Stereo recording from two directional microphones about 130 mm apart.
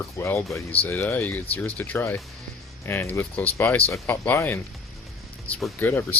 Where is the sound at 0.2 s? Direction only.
20° left (ahead or behind).